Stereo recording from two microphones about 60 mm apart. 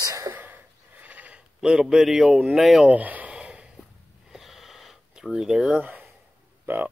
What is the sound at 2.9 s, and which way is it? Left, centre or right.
Speech, right.